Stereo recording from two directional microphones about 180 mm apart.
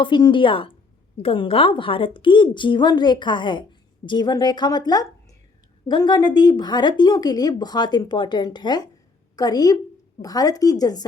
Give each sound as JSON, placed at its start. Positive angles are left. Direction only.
{"t": 0.0, "sound": "a woman's voice", "side_deg": 25}